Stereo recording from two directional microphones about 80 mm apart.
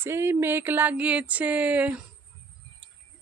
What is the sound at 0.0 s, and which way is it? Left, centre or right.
Speech, right.